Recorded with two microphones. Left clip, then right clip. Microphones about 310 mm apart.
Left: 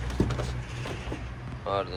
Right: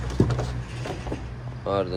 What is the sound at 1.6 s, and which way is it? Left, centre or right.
Speech, centre.